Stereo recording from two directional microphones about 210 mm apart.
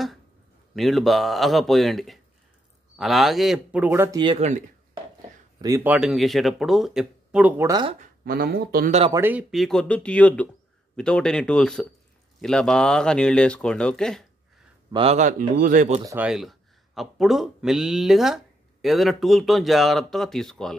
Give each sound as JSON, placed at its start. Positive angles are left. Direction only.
{"t": 0.7, "sound": "speech", "side_deg": 0}
{"t": 4.2, "sound": "speech", "side_deg": -30}
{"t": 5.6, "sound": "speech", "side_deg": -15}
{"t": 5.9, "sound": "speech", "side_deg": 0}
{"t": 8.3, "sound": "speech", "side_deg": -45}
{"t": 9.1, "sound": "speech", "side_deg": -10}
{"t": 14.9, "sound": "speech", "side_deg": -25}
{"t": 16.1, "sound": "speech", "side_deg": -5}